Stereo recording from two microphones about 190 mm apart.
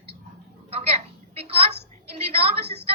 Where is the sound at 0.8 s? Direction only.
30° right (ahead or behind).